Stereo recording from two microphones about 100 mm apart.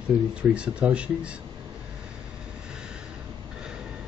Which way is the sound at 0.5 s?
10° right (ahead or behind).